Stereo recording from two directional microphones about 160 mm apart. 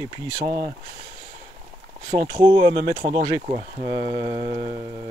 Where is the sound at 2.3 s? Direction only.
30° right (ahead or behind).